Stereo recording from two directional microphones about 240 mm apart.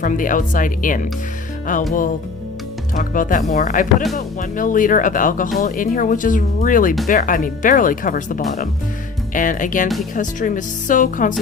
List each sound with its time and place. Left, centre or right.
0.0 s speech: left
2.9 s speech: left